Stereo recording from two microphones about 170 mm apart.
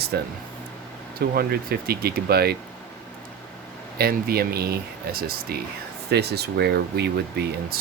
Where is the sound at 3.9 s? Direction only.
65° right (ahead or behind).